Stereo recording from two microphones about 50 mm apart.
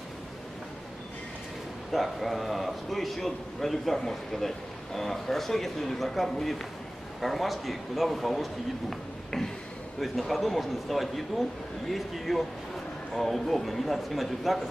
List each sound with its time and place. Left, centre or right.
1.9 s a man's voice: centre
9.9 s a man's voice: centre